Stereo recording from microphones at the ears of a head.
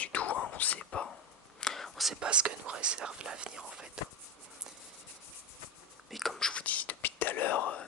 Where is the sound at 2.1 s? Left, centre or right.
Right.